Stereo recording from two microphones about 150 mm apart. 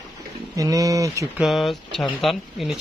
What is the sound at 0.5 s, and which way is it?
Speech, 20° right (ahead or behind).